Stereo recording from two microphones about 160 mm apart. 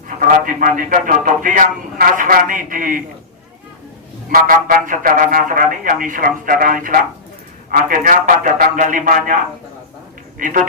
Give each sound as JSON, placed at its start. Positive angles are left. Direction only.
{"t": 0.2, "sound": "speech", "side_deg": -55}
{"t": 4.3, "sound": "speech", "side_deg": -60}
{"t": 10.3, "sound": "speech", "side_deg": -55}